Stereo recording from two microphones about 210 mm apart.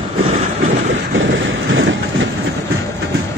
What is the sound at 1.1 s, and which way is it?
Vehicle, 65° right (ahead or behind).